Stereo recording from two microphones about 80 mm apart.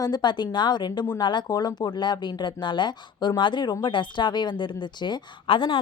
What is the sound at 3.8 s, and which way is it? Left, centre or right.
A woman's voice, left.